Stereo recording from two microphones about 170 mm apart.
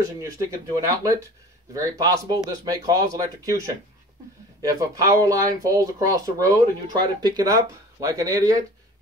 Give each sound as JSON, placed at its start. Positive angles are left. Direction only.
{"t": 0.2, "sound": "speech", "side_deg": -20}